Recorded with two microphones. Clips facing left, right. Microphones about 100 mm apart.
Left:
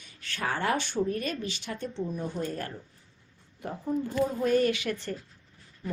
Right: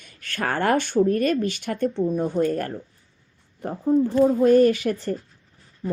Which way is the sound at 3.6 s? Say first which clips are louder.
Right 10 dB; 40° right (ahead or behind).